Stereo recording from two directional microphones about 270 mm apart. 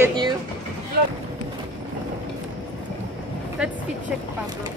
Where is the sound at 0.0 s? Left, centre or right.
Centre.